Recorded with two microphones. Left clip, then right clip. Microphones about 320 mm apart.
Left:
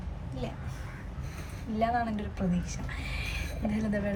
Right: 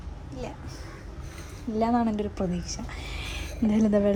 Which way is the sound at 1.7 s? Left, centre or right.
Centre.